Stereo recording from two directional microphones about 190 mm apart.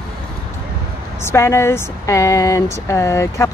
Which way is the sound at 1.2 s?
15° left (ahead or behind).